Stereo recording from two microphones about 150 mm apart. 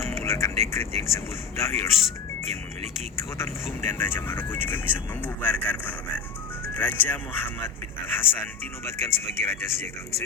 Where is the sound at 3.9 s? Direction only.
15° left (ahead or behind).